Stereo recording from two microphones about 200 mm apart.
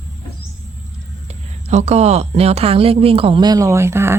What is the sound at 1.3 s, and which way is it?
A woman's voice, 35° right (ahead or behind).